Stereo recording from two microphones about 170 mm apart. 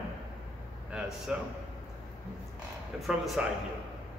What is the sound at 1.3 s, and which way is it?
Speech, 5° right (ahead or behind).